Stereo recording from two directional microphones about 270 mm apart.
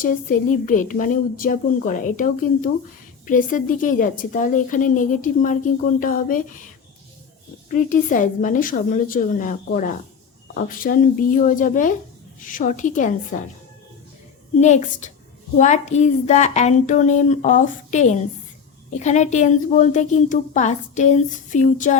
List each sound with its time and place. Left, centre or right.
0.0 s a woman's voice: left
7.7 s a woman's voice: left
14.6 s a woman's voice: left